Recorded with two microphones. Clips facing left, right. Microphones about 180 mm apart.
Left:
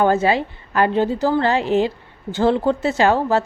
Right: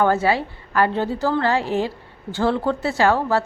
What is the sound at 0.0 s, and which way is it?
A woman's voice, 20° left (ahead or behind).